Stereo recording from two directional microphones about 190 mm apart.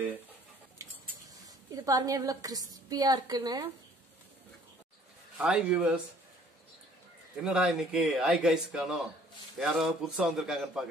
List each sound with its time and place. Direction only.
1.4 s a woman's voice: 20° right (ahead or behind)
5.4 s speech: 5° right (ahead or behind)
7.4 s speech: 5° right (ahead or behind)